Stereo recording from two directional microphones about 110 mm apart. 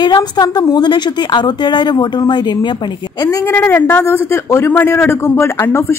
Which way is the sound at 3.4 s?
20° left (ahead or behind).